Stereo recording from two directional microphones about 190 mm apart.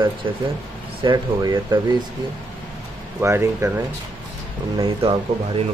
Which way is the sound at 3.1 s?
15° right (ahead or behind).